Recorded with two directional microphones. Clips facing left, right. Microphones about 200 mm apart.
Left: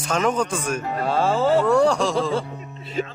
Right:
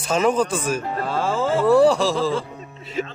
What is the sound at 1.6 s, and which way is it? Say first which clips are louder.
Speech: right 3 dB; 5° right (ahead or behind).